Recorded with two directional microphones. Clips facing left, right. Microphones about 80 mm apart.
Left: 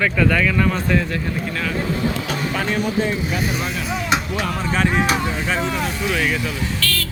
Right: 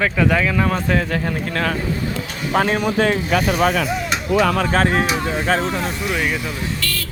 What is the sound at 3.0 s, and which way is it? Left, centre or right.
Speech, right.